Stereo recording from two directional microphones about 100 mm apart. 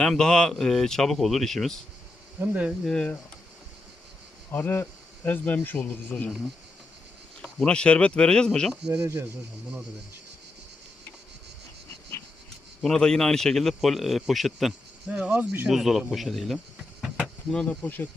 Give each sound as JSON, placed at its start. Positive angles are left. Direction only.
{"t": 0.0, "sound": "a man's voice", "side_deg": 5}
{"t": 2.4, "sound": "speech", "side_deg": -15}
{"t": 2.8, "sound": "speech", "side_deg": 10}
{"t": 4.5, "sound": "speech", "side_deg": 20}
{"t": 7.4, "sound": "speech", "side_deg": 10}
{"t": 8.9, "sound": "speech", "side_deg": -25}
{"t": 12.8, "sound": "a man's voice", "side_deg": 5}
{"t": 15.1, "sound": "speech", "side_deg": -10}
{"t": 15.7, "sound": "a man's voice", "side_deg": 0}
{"t": 17.5, "sound": "speech", "side_deg": 10}